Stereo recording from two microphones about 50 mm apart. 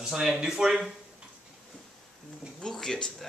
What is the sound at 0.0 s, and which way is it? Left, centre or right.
Speech, centre.